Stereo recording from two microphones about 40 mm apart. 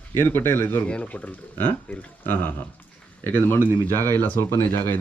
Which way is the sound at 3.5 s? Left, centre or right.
Left.